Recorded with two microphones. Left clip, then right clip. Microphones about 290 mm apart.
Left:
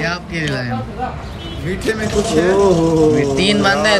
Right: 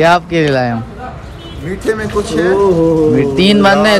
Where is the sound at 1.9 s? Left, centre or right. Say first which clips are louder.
Right 3 dB; centre.